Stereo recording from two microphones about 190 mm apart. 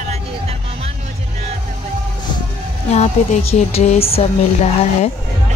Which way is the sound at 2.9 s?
35° left (ahead or behind).